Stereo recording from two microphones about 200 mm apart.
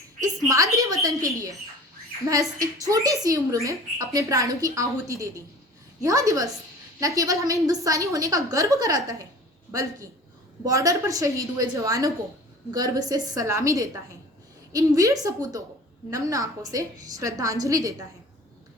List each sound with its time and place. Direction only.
0.2 s a sound: 15° right (ahead or behind)
2.3 s a woman's voice: 15° right (ahead or behind)
10.6 s a woman's voice: 15° right (ahead or behind)